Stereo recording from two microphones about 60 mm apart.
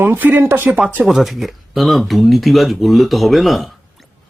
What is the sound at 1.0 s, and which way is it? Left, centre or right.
Speech, centre.